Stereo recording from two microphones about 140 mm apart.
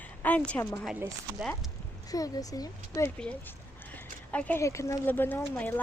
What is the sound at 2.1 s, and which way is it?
Speech, 25° left (ahead or behind).